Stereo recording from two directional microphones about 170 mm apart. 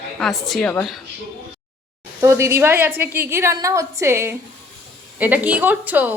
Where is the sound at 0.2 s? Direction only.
Centre (ahead or behind).